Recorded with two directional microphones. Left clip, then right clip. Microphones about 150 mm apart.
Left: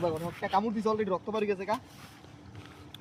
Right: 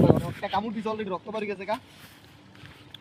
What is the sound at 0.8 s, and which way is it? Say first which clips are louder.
Speech: left 2 dB; 10° left (ahead or behind).